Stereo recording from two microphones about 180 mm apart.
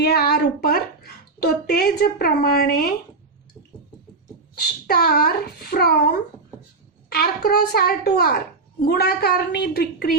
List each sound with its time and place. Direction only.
0.0 s a child's voice: 60° left (ahead or behind)
4.5 s a child's voice: 60° left (ahead or behind)
7.1 s a child's voice: 60° left (ahead or behind)